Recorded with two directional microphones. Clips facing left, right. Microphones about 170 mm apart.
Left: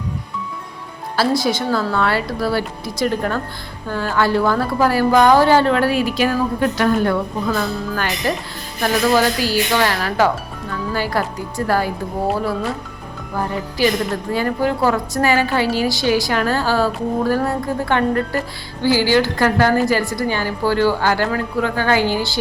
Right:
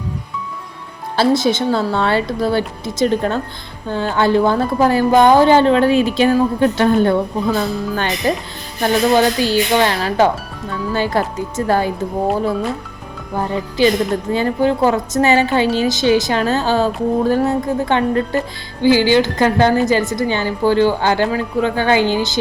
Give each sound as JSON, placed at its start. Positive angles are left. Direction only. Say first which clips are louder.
{"t": 1.1, "sound": "a woman's voice", "louder": "right 3 dB", "side_deg": -25}
{"t": 13.3, "sound": "a woman's voice", "louder": "right 3 dB", "side_deg": -20}